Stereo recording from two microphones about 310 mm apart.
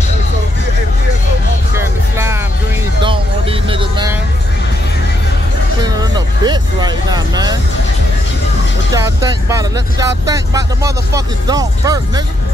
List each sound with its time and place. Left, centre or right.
1.8 s music: centre
3.0 s vehicle: centre
5.8 s vehicle: centre
8.9 s speech: centre